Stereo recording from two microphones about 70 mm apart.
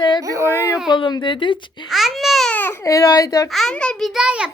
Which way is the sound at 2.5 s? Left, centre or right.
Left.